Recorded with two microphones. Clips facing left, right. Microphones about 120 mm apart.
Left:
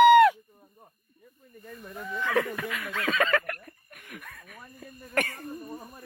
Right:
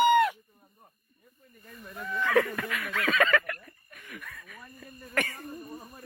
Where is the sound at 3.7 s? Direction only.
60° left (ahead or behind).